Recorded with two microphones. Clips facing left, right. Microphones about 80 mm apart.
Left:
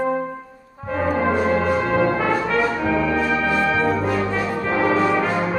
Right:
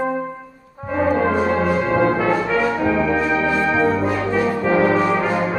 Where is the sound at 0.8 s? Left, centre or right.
Centre.